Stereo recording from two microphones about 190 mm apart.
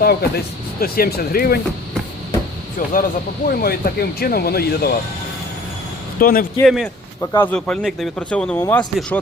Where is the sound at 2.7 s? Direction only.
45° left (ahead or behind).